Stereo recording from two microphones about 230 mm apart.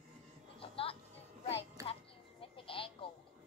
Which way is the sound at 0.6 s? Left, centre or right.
Left.